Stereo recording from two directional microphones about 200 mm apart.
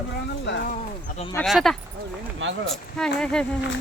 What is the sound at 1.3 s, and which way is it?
Speech, centre (ahead or behind).